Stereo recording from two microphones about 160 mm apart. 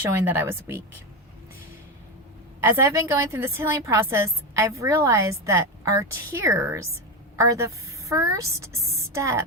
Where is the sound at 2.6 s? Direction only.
15° right (ahead or behind).